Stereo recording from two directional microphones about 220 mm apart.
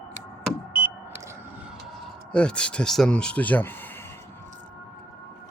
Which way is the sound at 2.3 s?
5° left (ahead or behind).